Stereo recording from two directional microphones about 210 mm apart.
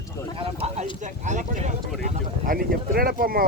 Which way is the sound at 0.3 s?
25° right (ahead or behind).